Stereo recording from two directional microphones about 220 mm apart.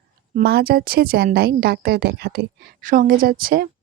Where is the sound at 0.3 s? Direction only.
45° right (ahead or behind).